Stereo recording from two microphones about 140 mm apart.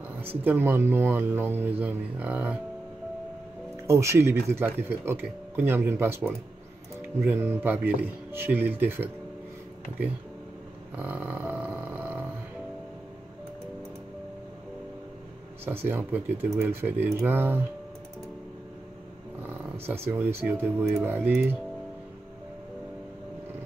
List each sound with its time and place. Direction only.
0.2 s speech: 15° right (ahead or behind)
3.8 s speech: 20° right (ahead or behind)
11.0 s a sound: 15° right (ahead or behind)
15.6 s speech: 15° right (ahead or behind)
20.1 s speech: 15° right (ahead or behind)